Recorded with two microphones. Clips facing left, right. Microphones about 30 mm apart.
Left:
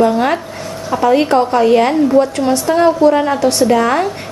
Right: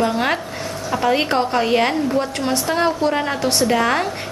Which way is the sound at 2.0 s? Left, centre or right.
Centre.